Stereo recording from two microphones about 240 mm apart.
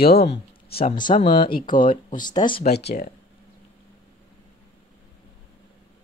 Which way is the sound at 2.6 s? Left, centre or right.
Left.